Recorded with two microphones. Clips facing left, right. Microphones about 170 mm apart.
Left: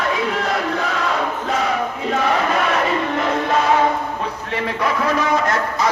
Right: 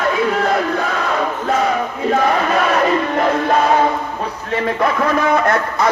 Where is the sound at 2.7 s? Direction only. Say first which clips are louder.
Right 4 dB; 45° right (ahead or behind).